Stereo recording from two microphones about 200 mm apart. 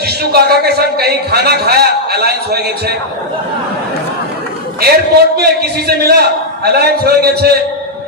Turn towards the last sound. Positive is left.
turn(degrees=-50)  # may be behind; listen again after turning